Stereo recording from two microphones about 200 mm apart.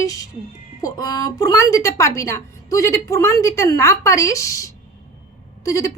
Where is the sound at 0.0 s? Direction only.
15° left (ahead or behind).